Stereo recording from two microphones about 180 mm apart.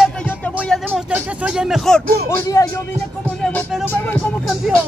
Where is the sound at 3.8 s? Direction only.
10° left (ahead or behind).